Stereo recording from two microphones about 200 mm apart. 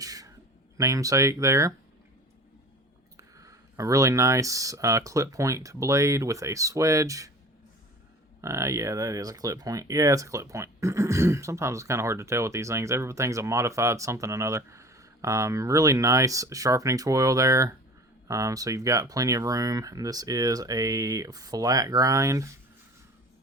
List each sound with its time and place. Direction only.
0.0 s a sound: 15° right (ahead or behind)
0.8 s speech: 15° right (ahead or behind)
3.2 s speech: 15° right (ahead or behind)
8.4 s speech: 15° right (ahead or behind)